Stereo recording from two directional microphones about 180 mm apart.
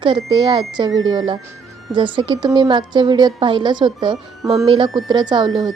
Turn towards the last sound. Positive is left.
turn(degrees=-25)  # may be behind; listen again after turning